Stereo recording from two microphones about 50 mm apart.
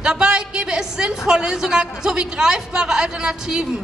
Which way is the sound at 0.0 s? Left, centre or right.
Centre.